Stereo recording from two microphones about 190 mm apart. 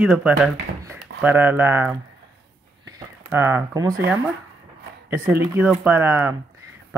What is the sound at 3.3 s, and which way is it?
Speech, 10° right (ahead or behind).